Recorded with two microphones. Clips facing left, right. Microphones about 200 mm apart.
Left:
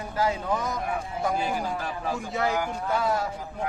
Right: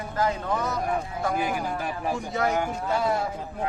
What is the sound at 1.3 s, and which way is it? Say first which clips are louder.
Speech: right 1 dB; 20° right (ahead or behind).